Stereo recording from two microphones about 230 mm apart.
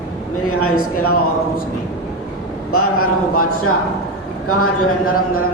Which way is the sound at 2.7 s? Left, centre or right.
Left.